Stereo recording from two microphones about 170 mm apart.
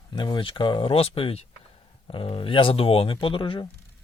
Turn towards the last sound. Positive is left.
turn(degrees=30)  # may be behind; listen again after turning